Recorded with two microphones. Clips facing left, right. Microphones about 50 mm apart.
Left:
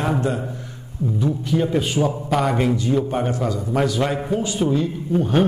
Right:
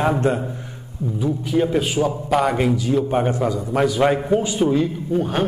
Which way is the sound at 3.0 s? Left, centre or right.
Centre.